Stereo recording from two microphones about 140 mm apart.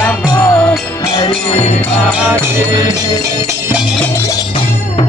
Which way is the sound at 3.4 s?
15° right (ahead or behind).